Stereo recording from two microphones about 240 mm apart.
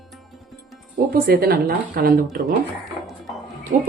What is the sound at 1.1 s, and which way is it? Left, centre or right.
A woman's voice, right.